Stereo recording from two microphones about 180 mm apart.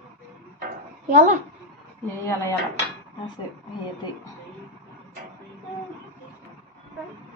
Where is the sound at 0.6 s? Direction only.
45° right (ahead or behind).